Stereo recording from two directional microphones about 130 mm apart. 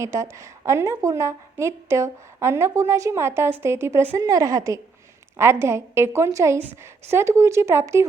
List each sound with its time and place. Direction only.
0.0 s a woman's voice: 20° right (ahead or behind)